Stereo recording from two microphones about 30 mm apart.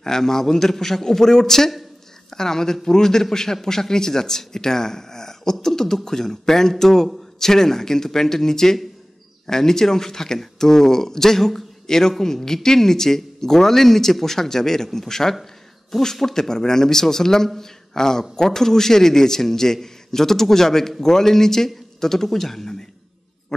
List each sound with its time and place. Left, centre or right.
0.0 s a man's voice: centre